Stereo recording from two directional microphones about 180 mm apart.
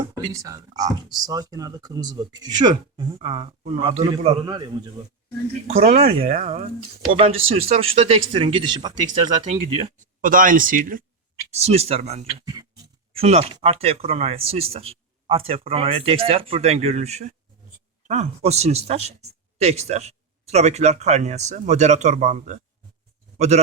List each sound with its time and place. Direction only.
0.0 s speech: 20° right (ahead or behind)
3.2 s speech: 35° right (ahead or behind)
4.4 s speech: 20° right (ahead or behind)
5.6 s speech: 35° right (ahead or behind)
9.3 s speech: 40° right (ahead or behind)
10.2 s speech: 50° right (ahead or behind)
11.5 s speech: 35° right (ahead or behind)